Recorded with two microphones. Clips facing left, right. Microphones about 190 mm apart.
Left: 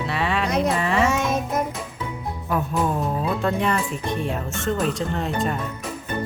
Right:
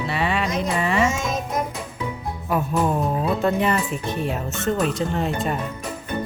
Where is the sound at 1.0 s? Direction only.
60° left (ahead or behind).